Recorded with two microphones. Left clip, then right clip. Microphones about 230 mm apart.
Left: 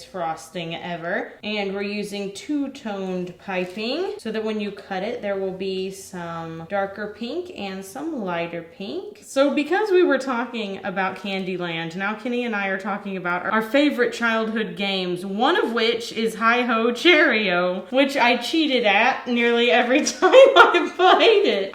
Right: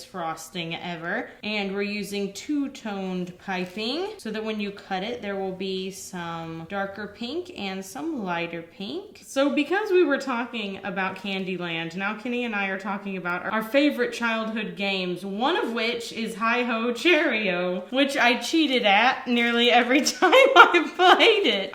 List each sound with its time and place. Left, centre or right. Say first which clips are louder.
0.3 s speech: left 3 dB; right
9.3 s a woman's voice: left 3 dB; centre
13.5 s speech: left 2 dB; left
17.9 s a woman's voice: left 3 dB; centre
18.5 s speech: left 2 dB; right
18.8 s a woman's voice: left 1 dB; right